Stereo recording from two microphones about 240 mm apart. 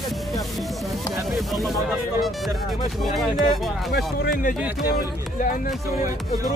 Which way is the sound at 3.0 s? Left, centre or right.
Centre.